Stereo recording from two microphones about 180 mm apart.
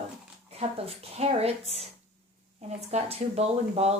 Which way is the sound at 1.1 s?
35° right (ahead or behind).